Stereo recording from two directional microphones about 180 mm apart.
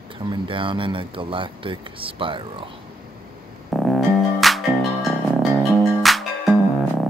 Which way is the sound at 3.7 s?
Centre (ahead or behind).